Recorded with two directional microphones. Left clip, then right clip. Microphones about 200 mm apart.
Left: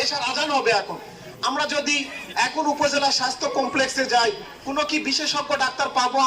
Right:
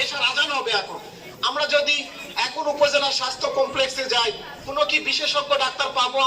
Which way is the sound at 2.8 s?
30° left (ahead or behind).